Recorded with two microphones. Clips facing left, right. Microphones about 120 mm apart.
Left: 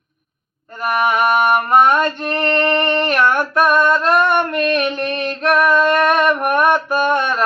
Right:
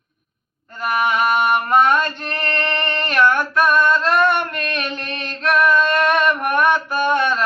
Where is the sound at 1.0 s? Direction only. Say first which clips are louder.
Left 3 dB; 50° left (ahead or behind).